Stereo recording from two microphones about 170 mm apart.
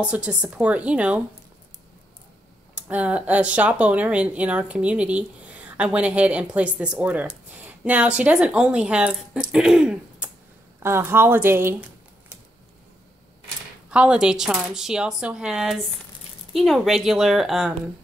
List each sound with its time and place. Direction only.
0.0 s speech: 5° right (ahead or behind)
2.7 s speech: 10° right (ahead or behind)
7.5 s a sound: 10° right (ahead or behind)
8.2 s speech: 5° right (ahead or behind)
9.4 s throat clearing: centre (ahead or behind)
10.8 s speech: 15° right (ahead or behind)
13.8 s speech: 5° right (ahead or behind)